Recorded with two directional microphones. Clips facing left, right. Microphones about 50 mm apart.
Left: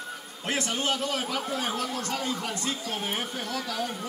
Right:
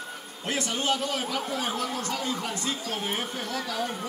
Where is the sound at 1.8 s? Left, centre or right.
Right.